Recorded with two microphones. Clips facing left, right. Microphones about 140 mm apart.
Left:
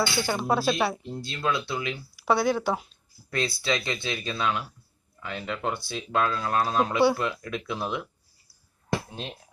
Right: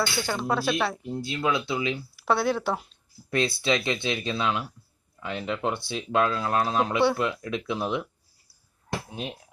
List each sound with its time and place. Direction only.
0.2 s speech: 10° left (ahead or behind)
1.0 s speech: 10° right (ahead or behind)
2.1 s speech: centre (ahead or behind)
3.2 s speech: 20° right (ahead or behind)